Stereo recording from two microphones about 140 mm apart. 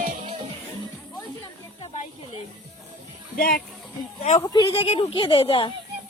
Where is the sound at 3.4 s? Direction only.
90° left.